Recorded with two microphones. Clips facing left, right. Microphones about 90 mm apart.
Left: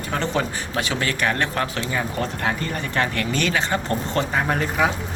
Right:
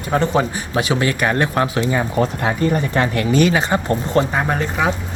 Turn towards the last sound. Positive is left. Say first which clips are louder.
# right 2 dB
turn(degrees=0)  # may be behind; listen again after turning